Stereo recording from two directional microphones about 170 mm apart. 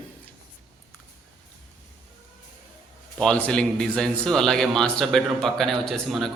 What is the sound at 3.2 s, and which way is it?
A man's voice, 5° left (ahead or behind).